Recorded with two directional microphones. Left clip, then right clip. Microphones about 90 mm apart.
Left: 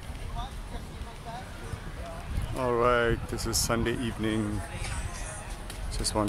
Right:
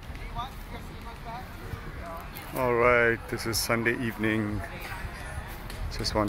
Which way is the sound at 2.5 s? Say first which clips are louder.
Right 2 dB; 5° left (ahead or behind).